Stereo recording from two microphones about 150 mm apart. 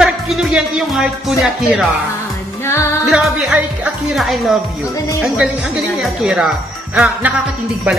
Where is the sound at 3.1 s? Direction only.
5° right (ahead or behind).